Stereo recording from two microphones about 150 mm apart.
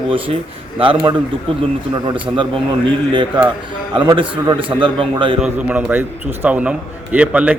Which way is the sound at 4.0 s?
30° right (ahead or behind).